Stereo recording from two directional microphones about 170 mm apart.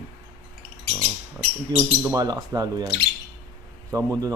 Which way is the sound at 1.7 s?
20° right (ahead or behind).